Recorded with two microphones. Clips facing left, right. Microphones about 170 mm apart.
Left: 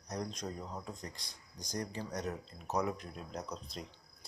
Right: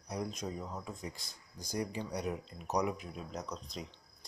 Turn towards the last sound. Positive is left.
turn(degrees=0)  # may be behind; listen again after turning